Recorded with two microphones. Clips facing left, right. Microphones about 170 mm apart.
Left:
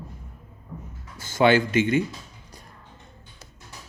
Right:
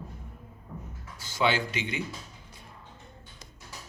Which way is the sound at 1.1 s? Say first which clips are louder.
Left 8 dB; 50° left (ahead or behind).